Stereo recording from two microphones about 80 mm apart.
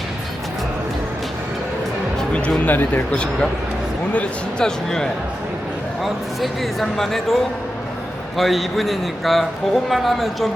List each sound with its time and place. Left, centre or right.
2.1 s music: centre
2.6 s a man's voice: centre